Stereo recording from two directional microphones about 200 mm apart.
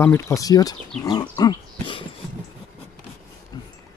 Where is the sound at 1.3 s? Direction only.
20° left (ahead or behind).